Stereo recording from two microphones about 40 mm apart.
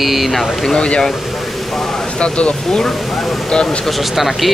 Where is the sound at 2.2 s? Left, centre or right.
Left.